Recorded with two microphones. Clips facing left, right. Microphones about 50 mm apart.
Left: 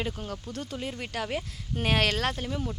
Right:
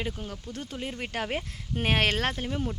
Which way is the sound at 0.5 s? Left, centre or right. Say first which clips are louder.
Right 1 dB; centre.